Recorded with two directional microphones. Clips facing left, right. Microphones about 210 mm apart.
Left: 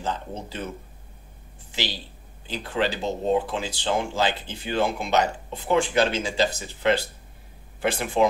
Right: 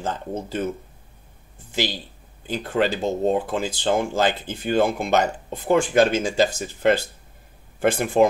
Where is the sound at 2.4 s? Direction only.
50° right (ahead or behind).